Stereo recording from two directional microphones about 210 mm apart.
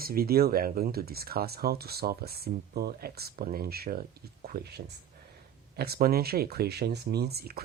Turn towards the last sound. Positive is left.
turn(degrees=-45)  # may be behind; listen again after turning